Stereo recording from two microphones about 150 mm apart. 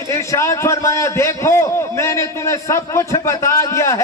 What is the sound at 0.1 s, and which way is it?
A man's voice, 20° left (ahead or behind).